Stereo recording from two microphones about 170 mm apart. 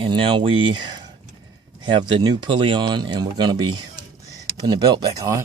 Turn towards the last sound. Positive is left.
turn(degrees=-20)  # may be behind; listen again after turning